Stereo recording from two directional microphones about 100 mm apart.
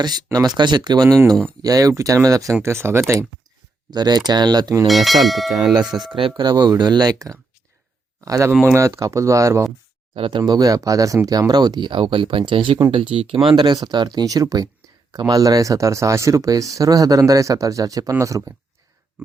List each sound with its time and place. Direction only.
0.3 s speech: 45° right (ahead or behind); by 3.0 s 25° right (ahead or behind)
3.9 s speech: 45° right (ahead or behind)
4.9 s speech: centre (ahead or behind)
6.1 s speech: 60° right (ahead or behind); by 9.6 s 30° right (ahead or behind)
10.2 s speech: 60° right (ahead or behind)
10.4 s speech: 40° right (ahead or behind); by 13.4 s 65° right (ahead or behind)
13.5 s speech: 50° right (ahead or behind); by 18.5 s 35° right (ahead or behind)